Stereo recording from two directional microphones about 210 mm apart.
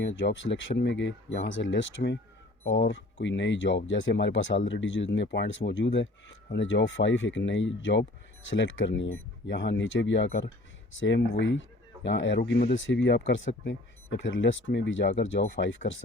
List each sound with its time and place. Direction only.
0.2 s speech: 60° left (ahead or behind)
12.4 s speech: 45° left (ahead or behind)
12.7 s speech: 65° left (ahead or behind)